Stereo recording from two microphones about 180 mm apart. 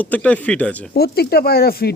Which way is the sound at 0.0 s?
10° left (ahead or behind).